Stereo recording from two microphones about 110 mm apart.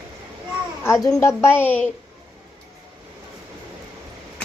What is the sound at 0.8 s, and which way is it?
A woman's voice, 25° left (ahead or behind).